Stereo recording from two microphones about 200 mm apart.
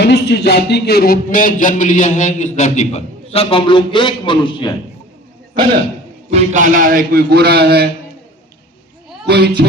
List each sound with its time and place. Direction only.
0.0 s speech: 55° left (ahead or behind); by 4.7 s 25° left (ahead or behind)
6.3 s a man's voice: 40° right (ahead or behind)
9.2 s speech: 55° right (ahead or behind)